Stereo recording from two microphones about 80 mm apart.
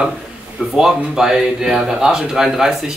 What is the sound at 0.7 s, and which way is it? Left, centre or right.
Speech, centre.